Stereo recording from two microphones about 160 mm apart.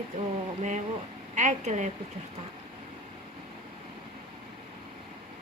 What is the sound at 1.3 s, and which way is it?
Speech, 50° right (ahead or behind).